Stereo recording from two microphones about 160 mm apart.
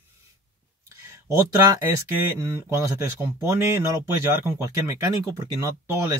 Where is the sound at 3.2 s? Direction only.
15° right (ahead or behind).